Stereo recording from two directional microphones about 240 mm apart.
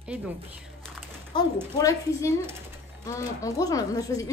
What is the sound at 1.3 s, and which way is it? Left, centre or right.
Speech, centre.